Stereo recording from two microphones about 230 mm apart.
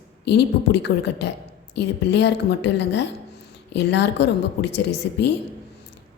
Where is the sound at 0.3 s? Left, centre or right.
Left.